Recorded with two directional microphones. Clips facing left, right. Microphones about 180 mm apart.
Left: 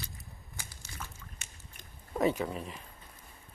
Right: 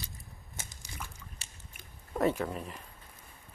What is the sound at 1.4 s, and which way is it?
Biting, 35° right (ahead or behind).